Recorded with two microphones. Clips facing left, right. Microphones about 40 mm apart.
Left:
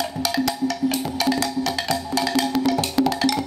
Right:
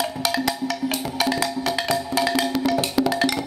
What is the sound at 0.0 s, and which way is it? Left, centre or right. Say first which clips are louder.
Music: even; centre.